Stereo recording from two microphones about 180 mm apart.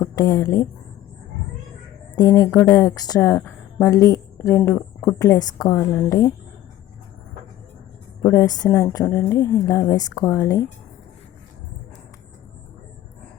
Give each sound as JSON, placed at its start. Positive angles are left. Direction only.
{"t": 0.0, "sound": "speech", "side_deg": 20}
{"t": 2.1, "sound": "a woman's voice", "side_deg": 20}
{"t": 8.2, "sound": "a woman's voice", "side_deg": 20}